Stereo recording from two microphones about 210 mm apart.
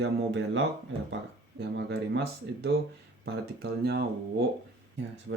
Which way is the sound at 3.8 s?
50° right (ahead or behind).